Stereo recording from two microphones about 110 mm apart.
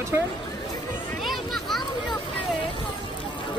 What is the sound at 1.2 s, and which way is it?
Children playing, centre (ahead or behind).